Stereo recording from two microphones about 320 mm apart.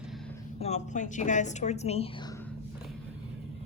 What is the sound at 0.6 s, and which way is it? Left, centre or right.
A woman's voice, left.